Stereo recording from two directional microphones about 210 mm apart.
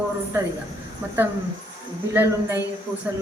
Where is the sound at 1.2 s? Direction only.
10° right (ahead or behind).